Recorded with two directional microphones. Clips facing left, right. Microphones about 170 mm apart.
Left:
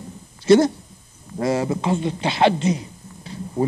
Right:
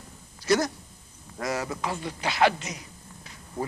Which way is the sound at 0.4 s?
25° left (ahead or behind).